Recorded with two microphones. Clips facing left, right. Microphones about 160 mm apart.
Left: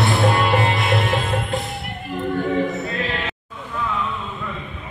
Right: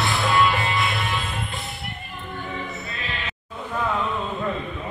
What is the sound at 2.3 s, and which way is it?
Choir, 85° left.